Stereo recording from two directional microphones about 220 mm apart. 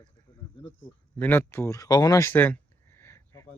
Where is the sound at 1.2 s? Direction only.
10° left (ahead or behind).